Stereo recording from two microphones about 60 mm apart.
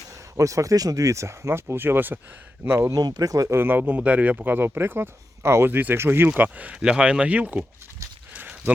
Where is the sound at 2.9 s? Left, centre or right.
Right.